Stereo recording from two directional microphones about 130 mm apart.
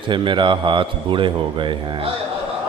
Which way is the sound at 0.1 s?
40° right (ahead or behind).